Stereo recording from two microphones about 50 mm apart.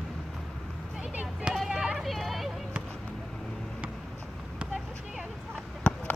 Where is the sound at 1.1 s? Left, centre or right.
Centre.